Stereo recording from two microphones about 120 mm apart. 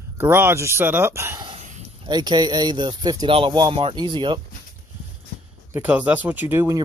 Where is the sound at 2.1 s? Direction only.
35° right (ahead or behind).